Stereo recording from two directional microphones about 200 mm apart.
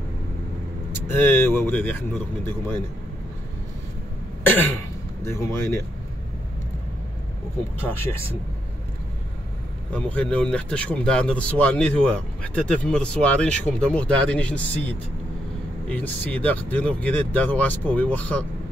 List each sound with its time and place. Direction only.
1.3 s speech: 10° left (ahead or behind)
4.4 s cough: 10° left (ahead or behind)
5.2 s speech: 15° left (ahead or behind)
7.8 s speech: 10° left (ahead or behind)
9.9 s speech: 5° left (ahead or behind)